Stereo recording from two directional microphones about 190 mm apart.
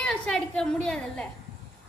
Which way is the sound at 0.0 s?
5° left (ahead or behind).